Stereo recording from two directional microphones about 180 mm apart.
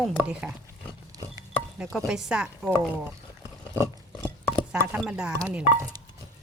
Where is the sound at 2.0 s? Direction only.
5° right (ahead or behind).